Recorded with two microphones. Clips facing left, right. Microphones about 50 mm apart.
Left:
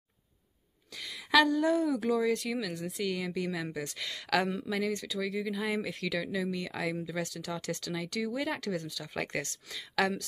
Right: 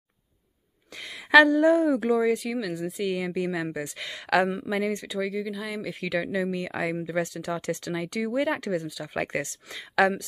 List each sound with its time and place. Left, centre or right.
0.9 s speech: right
2.3 s speech: centre
3.1 s a woman's voice: right
5.3 s speech: centre
5.9 s a woman's voice: right